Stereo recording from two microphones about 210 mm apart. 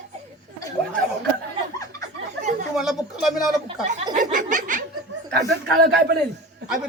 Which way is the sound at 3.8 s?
35° right (ahead or behind).